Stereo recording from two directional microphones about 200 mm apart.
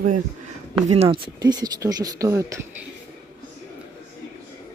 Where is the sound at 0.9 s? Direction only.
30° right (ahead or behind).